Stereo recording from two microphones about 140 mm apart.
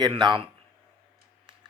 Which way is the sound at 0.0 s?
35° right (ahead or behind).